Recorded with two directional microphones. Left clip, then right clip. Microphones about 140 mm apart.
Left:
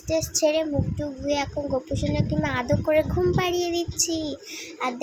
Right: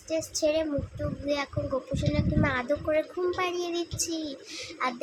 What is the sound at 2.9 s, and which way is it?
A child's voice, 30° left (ahead or behind).